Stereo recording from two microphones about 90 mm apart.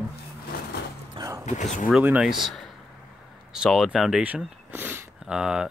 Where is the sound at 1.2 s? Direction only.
75° right (ahead or behind).